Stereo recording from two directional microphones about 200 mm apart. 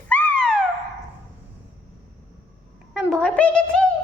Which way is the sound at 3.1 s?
5° left (ahead or behind).